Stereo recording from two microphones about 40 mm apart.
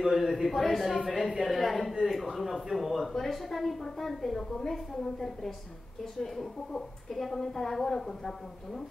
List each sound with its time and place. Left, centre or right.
0.0 s a woman's voice: centre